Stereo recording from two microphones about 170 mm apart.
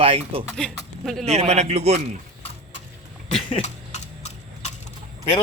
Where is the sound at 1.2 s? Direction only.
40° right (ahead or behind).